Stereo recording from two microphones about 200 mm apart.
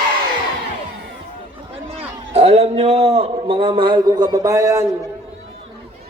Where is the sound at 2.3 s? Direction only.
30° right (ahead or behind); by 4.8 s 15° right (ahead or behind).